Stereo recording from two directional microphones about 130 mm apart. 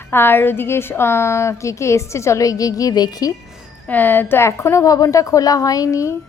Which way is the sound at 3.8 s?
15° left (ahead or behind).